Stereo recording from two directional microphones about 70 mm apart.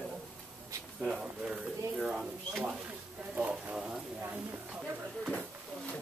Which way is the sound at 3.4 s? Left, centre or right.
Centre.